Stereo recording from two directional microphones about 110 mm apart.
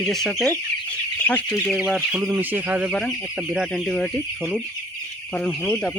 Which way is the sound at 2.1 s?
10° right (ahead or behind).